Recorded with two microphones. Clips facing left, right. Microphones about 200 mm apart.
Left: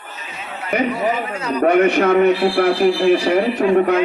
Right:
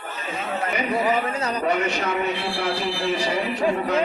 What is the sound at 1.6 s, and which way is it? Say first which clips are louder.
A man's voice: left 12 dB; 60° left (ahead or behind).